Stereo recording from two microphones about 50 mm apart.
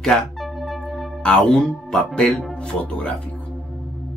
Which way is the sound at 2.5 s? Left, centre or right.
Left.